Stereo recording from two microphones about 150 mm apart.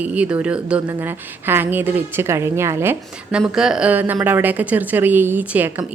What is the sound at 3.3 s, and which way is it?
Speech, 5° right (ahead or behind).